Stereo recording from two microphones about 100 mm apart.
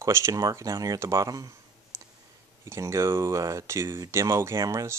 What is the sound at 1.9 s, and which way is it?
Clicking, 30° right (ahead or behind).